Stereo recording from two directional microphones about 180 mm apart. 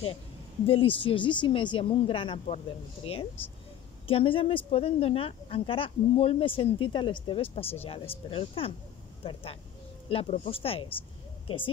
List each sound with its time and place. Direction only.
0.7 s speech: 30° left (ahead or behind)